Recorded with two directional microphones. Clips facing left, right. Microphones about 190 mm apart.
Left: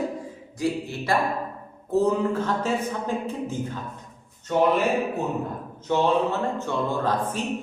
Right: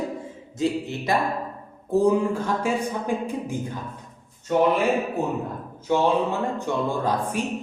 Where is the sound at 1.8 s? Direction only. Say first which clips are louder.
Right 2 dB; 15° right (ahead or behind).